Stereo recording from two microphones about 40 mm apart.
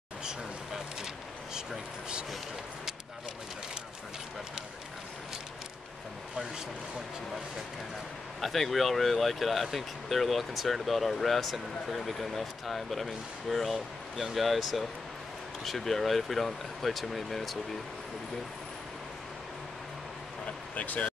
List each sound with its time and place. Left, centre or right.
1.5 s vehicle: right
8.4 s speech: centre
20.4 s a sound: left